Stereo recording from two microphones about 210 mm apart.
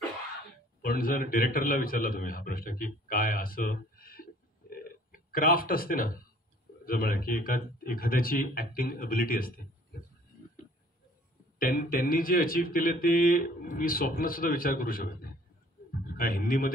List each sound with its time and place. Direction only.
0.8 s a man's voice: 40° left (ahead or behind)
11.6 s speech: 40° left (ahead or behind)